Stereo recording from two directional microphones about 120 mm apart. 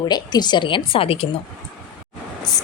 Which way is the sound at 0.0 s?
35° left (ahead or behind).